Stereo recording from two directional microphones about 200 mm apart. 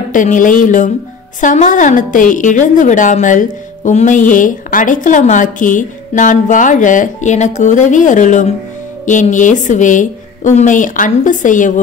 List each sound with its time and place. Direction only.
0.1 s a woman's voice: 40° left (ahead or behind)